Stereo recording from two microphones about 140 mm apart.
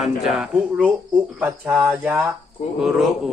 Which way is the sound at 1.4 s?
10° right (ahead or behind).